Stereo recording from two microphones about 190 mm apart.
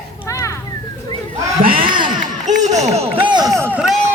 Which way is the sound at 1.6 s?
50° right (ahead or behind).